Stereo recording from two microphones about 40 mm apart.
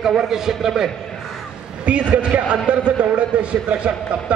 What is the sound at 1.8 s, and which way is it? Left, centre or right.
A man's voice, right.